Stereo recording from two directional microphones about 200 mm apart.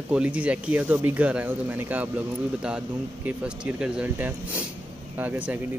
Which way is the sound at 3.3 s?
5° right (ahead or behind).